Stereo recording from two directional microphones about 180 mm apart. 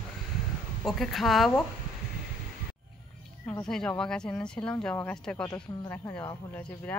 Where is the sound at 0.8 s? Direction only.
Centre (ahead or behind).